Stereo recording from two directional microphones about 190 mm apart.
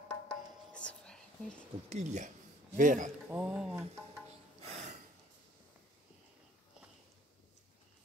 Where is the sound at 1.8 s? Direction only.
35° right (ahead or behind).